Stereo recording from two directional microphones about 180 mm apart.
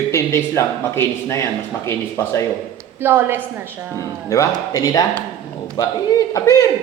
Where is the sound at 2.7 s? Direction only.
15° right (ahead or behind).